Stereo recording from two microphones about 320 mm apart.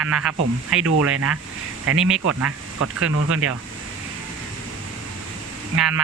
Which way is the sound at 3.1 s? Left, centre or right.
Right.